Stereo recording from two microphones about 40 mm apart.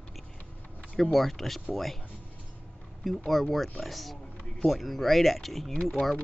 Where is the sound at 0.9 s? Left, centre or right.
Centre.